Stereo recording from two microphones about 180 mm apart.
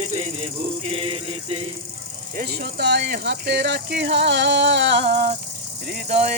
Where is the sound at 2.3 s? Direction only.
65° right (ahead or behind).